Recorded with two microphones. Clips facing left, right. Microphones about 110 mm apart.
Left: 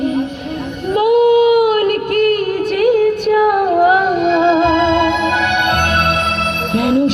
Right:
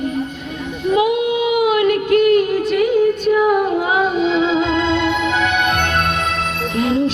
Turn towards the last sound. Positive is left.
turn(degrees=60)  # may be behind; listen again after turning